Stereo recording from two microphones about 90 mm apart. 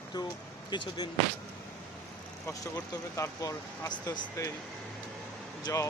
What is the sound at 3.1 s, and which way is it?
Speech, 35° left (ahead or behind).